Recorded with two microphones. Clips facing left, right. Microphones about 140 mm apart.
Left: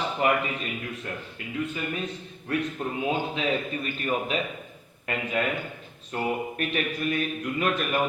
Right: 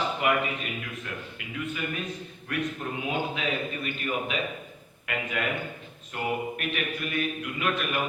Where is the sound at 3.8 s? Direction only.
40° left (ahead or behind).